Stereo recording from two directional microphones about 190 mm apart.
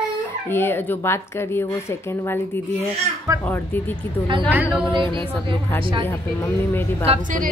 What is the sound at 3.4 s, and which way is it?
Speech, 10° left (ahead or behind).